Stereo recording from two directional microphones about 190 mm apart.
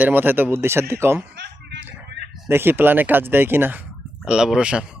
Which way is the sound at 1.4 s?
65° right (ahead or behind).